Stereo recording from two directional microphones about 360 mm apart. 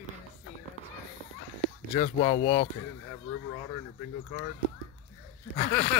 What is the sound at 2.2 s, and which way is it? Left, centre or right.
Speech, centre.